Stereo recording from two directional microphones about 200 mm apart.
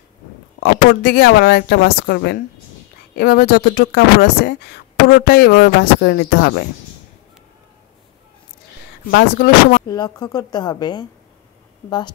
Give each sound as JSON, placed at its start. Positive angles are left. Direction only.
{"t": 0.6, "sound": "speech", "side_deg": 50}
{"t": 9.1, "sound": "speech", "side_deg": 55}
{"t": 9.8, "sound": "speech", "side_deg": 20}